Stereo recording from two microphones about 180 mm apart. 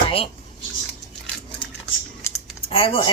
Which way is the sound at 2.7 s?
30° left (ahead or behind).